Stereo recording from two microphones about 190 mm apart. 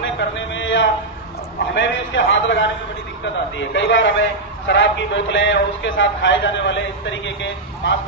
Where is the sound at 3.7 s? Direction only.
75° left (ahead or behind).